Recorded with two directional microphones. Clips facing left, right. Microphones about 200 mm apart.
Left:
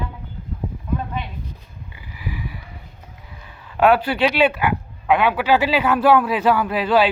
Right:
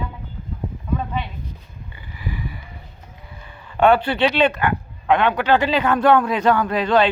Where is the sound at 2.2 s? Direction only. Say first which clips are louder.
Right 1 dB; 5° left (ahead or behind).